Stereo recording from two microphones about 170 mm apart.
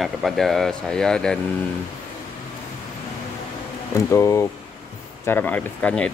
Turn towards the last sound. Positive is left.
turn(degrees=10)  # may be behind; listen again after turning